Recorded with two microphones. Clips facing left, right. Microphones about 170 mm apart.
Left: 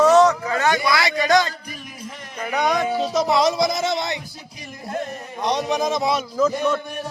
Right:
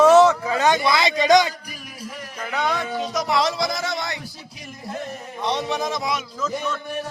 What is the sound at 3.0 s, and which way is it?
Speech, 30° left (ahead or behind).